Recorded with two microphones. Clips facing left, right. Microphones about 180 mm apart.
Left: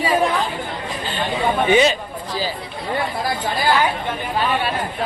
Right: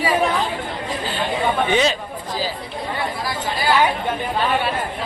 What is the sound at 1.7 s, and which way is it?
Speech, centre (ahead or behind).